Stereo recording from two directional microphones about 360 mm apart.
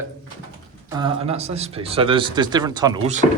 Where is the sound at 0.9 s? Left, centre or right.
Centre.